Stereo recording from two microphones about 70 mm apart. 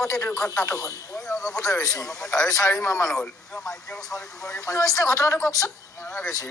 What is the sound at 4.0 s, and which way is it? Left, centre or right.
Speech, left.